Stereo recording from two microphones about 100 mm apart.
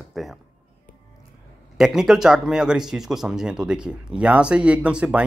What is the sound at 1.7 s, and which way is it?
Speech, 5° right (ahead or behind).